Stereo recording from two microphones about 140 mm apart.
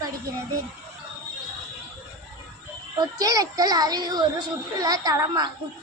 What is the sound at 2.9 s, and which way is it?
A child's voice, 25° right (ahead or behind).